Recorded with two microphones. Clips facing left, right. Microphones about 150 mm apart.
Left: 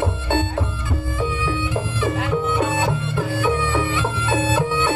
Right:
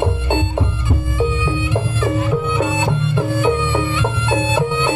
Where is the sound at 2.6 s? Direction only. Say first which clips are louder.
Right 2 dB; 20° right (ahead or behind).